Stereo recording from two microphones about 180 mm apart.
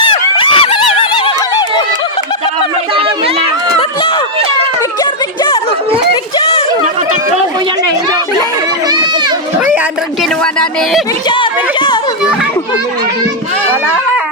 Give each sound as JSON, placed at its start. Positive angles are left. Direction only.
{"t": 0.0, "sound": "a sound", "side_deg": 25}
{"t": 2.9, "sound": "chatter", "side_deg": -30}
{"t": 6.3, "sound": "a sound", "side_deg": 30}
{"t": 8.9, "sound": "run", "side_deg": -25}
{"t": 10.4, "sound": "speech", "side_deg": 5}
{"t": 11.3, "sound": "speech", "side_deg": 25}